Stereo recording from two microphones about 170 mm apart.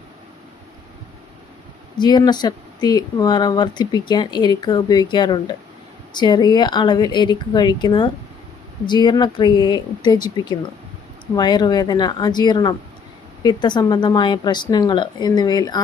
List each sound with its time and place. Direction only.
2.0 s speech: 25° left (ahead or behind)